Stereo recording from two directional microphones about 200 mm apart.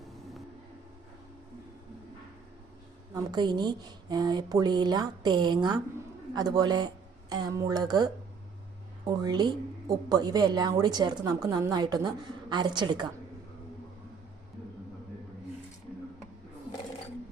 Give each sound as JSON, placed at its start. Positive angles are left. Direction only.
{"t": 3.2, "sound": "speech", "side_deg": -20}